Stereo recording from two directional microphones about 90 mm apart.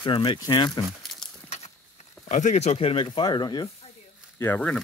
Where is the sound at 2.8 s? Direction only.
80° left; by 3.6 s 55° left (ahead or behind).